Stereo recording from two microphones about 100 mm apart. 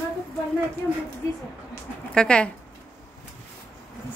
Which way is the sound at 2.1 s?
10° left (ahead or behind).